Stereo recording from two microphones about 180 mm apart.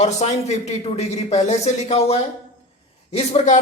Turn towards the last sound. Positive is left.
turn(degrees=35)  # may be behind; listen again after turning